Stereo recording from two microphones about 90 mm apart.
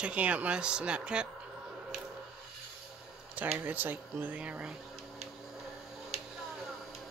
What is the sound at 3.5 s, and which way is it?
Speech, 20° right (ahead or behind).